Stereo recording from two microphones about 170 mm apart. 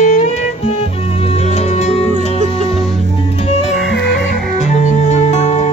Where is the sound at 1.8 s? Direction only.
40° left (ahead or behind).